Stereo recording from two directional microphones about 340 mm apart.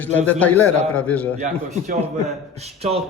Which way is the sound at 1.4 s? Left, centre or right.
Right.